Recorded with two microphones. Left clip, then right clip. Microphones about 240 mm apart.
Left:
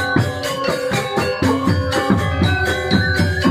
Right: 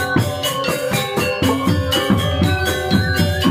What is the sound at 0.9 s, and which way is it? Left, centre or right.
Music, right.